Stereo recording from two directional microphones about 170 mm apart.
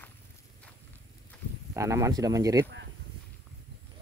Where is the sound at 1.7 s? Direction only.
20° right (ahead or behind).